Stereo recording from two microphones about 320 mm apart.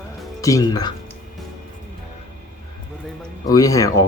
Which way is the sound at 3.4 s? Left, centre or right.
Centre.